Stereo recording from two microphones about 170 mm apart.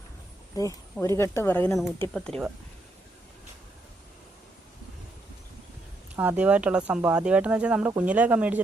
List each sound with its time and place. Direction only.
0.5 s speech: 20° left (ahead or behind); by 2.5 s 5° left (ahead or behind)
6.1 s speech: 10° right (ahead or behind)